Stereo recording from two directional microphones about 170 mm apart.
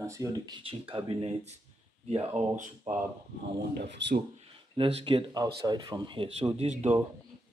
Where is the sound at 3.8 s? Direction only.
80° right.